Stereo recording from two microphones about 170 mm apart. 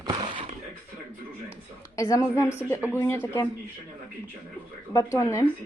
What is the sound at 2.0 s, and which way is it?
A woman's voice, 20° left (ahead or behind).